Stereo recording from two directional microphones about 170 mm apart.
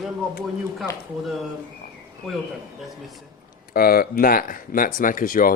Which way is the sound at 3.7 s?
60° left (ahead or behind).